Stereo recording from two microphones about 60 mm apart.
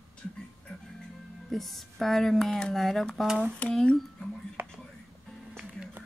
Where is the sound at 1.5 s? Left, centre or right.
Centre.